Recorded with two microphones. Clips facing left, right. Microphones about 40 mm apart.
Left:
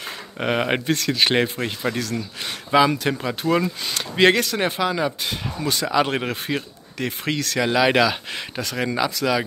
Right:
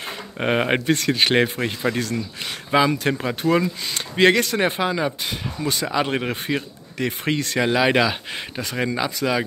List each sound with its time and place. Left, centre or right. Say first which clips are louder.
0.4 s speech: right 1 dB; centre
0.9 s speech: right 2 dB; right
1.2 s speech: even; centre
4.6 s speech: even; centre
4.9 s speech: even; centre
7.6 s speech: left 1 dB; centre
8.8 s speech: left 1 dB; centre